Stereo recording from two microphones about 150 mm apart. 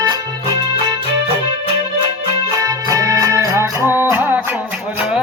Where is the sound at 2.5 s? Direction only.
25° right (ahead or behind).